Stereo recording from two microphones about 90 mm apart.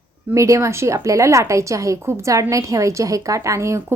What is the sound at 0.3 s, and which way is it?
A woman's voice, 35° right (ahead or behind).